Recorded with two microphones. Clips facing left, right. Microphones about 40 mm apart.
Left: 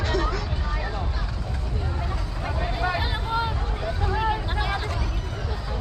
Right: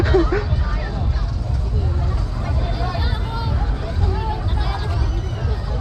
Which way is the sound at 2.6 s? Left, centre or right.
Left.